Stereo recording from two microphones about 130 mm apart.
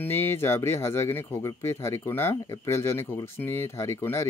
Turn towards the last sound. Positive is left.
turn(degrees=20)  # may be behind; listen again after turning